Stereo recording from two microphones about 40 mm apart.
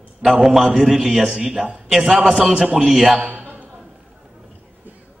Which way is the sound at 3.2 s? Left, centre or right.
Right.